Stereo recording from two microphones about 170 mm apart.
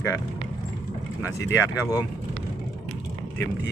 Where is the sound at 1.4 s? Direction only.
20° left (ahead or behind).